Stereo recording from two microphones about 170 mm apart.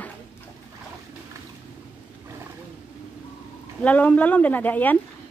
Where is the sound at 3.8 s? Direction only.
10° left (ahead or behind).